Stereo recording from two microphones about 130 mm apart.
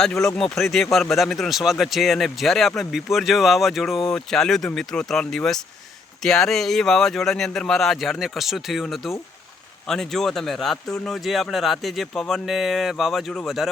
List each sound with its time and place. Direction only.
0.0 s speech: 5° left (ahead or behind)